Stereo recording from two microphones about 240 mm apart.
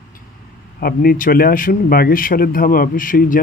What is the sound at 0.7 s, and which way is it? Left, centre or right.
A man's voice, left.